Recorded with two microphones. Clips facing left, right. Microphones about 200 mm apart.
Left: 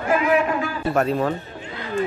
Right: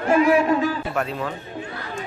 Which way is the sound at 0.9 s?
40° left (ahead or behind).